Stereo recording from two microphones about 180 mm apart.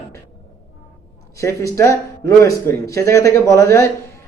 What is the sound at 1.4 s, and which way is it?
Speech, 15° left (ahead or behind).